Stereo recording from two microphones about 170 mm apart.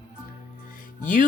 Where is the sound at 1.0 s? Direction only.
50° left (ahead or behind).